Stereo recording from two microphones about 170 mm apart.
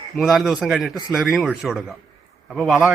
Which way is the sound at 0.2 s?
Centre (ahead or behind).